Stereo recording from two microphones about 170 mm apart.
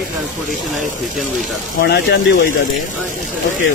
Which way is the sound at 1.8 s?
75° left (ahead or behind).